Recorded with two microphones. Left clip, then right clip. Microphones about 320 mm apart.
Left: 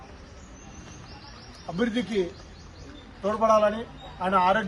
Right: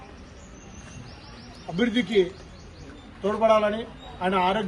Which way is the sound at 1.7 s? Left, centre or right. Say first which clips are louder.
Right 4 dB; left.